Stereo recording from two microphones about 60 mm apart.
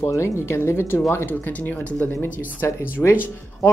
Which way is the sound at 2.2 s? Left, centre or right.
Left.